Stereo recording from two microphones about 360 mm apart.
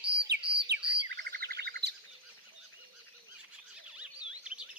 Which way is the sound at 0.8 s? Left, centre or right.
Right.